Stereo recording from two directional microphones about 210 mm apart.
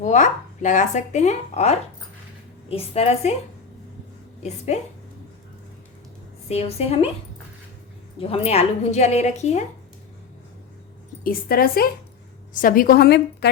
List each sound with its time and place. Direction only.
0.0 s a woman's voice: 35° left (ahead or behind)
4.4 s speech: 30° left (ahead or behind)
6.5 s a woman's voice: 30° left (ahead or behind)
8.2 s speech: 30° left (ahead or behind)
11.2 s a woman's voice: 45° left (ahead or behind)